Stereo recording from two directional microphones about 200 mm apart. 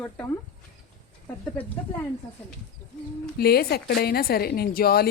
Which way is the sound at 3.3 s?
50° left (ahead or behind).